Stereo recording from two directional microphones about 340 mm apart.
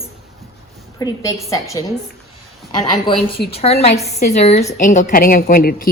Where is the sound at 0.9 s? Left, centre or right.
Centre.